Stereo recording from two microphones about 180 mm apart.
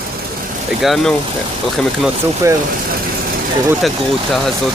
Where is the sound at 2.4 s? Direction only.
15° right (ahead or behind).